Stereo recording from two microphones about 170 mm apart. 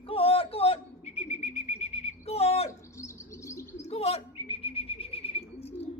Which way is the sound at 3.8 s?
35° left (ahead or behind).